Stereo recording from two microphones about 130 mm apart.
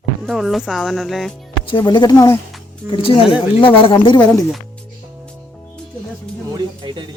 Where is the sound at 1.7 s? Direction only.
35° left (ahead or behind).